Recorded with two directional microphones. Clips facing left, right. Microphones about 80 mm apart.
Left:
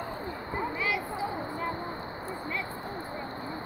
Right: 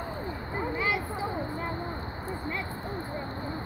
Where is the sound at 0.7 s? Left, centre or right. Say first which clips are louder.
Right 3 dB; right.